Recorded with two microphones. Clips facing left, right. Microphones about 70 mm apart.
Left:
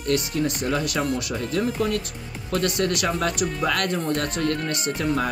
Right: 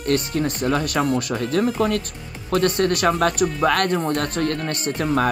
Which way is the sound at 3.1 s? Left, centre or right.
Right.